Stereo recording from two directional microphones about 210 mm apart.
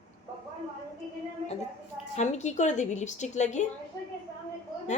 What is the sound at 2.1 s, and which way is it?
A woman's voice, 35° left (ahead or behind).